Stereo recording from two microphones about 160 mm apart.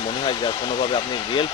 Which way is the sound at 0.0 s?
30° left (ahead or behind).